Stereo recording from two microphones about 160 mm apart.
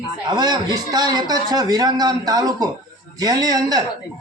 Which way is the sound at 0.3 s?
25° right (ahead or behind).